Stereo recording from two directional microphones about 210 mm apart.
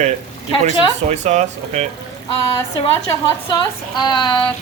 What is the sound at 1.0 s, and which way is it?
Speech, 35° right (ahead or behind).